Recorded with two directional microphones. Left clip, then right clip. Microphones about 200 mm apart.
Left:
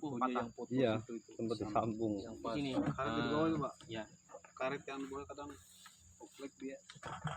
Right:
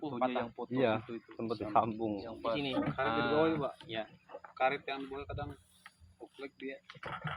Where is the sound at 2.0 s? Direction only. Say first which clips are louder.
Right 2 dB; 10° right (ahead or behind).